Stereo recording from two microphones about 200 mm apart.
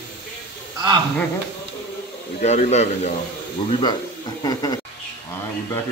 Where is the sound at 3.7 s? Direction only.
25° left (ahead or behind).